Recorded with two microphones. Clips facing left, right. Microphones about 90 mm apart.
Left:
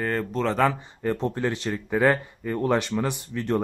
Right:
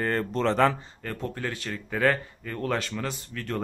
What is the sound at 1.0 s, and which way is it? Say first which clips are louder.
Speech: left 7 dB; 25° left (ahead or behind).